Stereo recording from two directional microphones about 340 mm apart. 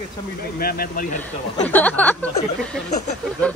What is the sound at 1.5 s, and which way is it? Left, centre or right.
Speech, centre.